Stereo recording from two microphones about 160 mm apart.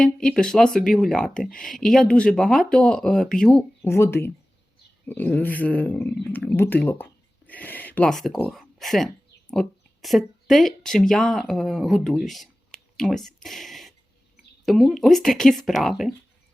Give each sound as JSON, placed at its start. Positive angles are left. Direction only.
{"t": 0.0, "sound": "speech", "side_deg": 5}
{"t": 3.8, "sound": "speech", "side_deg": 15}